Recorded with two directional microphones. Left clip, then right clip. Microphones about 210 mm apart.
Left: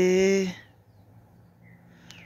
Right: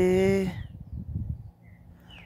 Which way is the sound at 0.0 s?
5° left (ahead or behind).